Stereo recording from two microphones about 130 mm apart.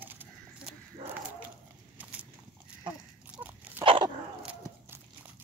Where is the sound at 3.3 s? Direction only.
15° right (ahead or behind).